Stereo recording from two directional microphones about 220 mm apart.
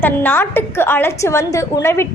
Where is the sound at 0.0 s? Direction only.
10° left (ahead or behind).